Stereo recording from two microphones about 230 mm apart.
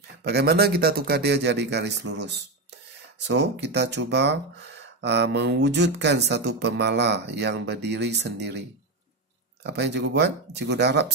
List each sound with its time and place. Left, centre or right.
0.2 s speech: right